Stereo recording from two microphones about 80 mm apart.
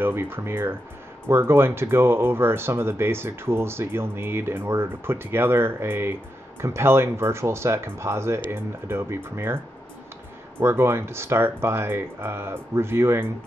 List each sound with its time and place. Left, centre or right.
0.0 s speech: right
10.6 s speech: right